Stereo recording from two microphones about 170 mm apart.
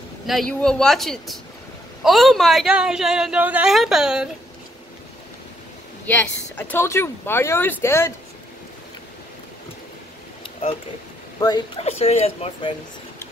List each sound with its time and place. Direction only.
0.3 s speech: 5° left (ahead or behind)
6.0 s speech: 10° left (ahead or behind)
11.3 s speech: 25° left (ahead or behind)
11.8 s speech: 40° left (ahead or behind)